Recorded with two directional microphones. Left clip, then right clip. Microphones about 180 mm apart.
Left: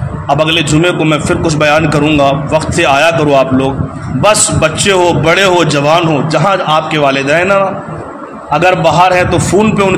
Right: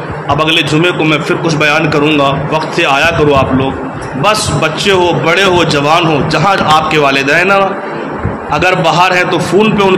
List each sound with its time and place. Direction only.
0.3 s a man's voice: 40° left (ahead or behind)